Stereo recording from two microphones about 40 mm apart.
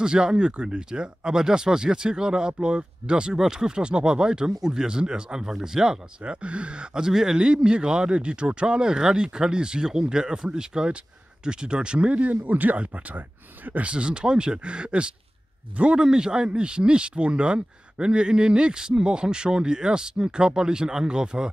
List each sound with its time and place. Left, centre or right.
0.0 s a man's voice: right
6.2 s a man's voice: right
13.8 s a man's voice: right